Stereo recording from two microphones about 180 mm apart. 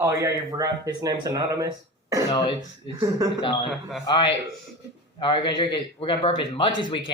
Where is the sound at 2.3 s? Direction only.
25° left (ahead or behind).